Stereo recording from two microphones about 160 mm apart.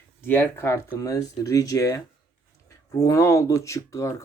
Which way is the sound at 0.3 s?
10° left (ahead or behind).